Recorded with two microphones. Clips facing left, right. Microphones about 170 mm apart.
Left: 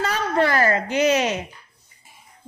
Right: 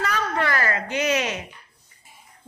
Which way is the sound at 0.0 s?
30° left (ahead or behind).